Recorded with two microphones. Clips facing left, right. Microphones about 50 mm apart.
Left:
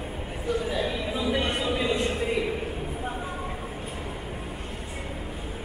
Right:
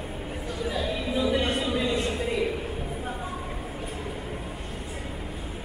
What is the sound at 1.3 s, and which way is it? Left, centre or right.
Music, left.